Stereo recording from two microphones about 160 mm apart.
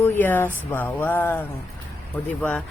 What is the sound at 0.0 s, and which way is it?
Speech, 10° left (ahead or behind).